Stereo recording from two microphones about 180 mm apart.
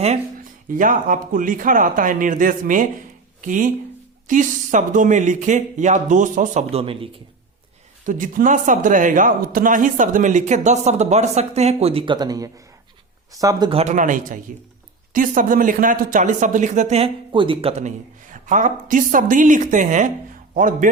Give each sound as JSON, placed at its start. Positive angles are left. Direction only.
{"t": 0.7, "sound": "speech", "side_deg": -45}
{"t": 8.0, "sound": "speech", "side_deg": -50}
{"t": 13.8, "sound": "speech", "side_deg": -45}